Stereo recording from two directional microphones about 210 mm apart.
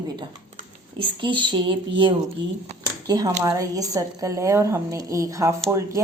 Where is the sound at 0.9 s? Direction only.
25° right (ahead or behind).